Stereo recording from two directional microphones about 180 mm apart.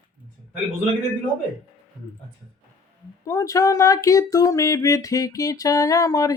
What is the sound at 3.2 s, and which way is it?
Speech, 15° left (ahead or behind).